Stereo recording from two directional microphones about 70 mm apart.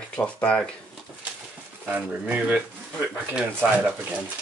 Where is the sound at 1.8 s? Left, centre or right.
Right.